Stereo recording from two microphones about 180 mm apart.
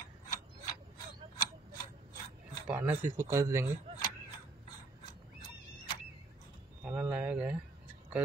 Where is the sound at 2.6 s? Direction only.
10° right (ahead or behind).